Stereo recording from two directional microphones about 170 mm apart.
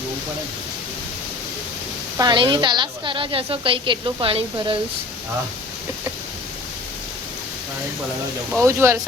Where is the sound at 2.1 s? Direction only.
25° right (ahead or behind).